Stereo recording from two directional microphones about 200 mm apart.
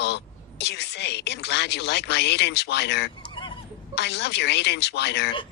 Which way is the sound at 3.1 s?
25° left (ahead or behind).